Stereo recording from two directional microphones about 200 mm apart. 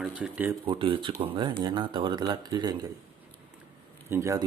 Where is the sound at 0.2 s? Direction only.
10° right (ahead or behind).